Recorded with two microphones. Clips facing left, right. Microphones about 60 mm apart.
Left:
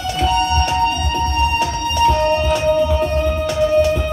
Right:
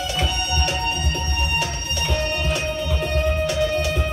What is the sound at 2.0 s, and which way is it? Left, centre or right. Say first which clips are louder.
Music: left 10 dB; left.